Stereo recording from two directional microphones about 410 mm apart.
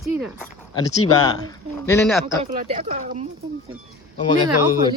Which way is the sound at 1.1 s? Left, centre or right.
Centre.